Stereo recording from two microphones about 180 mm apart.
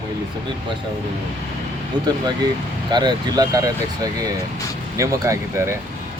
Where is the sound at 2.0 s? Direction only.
25° right (ahead or behind).